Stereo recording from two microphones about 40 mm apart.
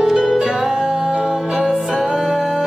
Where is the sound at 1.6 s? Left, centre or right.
Centre.